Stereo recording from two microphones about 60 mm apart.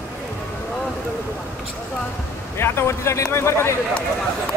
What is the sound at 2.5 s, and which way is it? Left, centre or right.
Speech, left.